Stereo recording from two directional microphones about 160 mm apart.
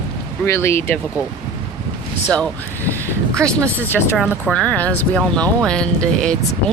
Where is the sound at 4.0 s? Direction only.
Centre (ahead or behind).